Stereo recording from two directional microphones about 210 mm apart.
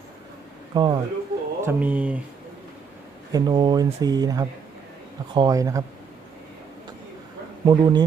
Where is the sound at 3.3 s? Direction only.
20° right (ahead or behind).